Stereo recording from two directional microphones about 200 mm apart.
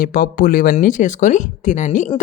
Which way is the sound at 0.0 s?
45° left (ahead or behind).